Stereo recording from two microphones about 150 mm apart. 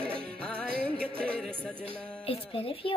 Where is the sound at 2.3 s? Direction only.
40° left (ahead or behind).